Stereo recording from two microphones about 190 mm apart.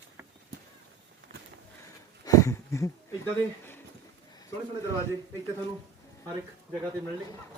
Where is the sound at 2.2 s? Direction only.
15° left (ahead or behind).